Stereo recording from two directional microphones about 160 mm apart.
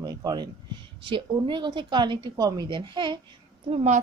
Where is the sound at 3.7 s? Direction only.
45° right (ahead or behind).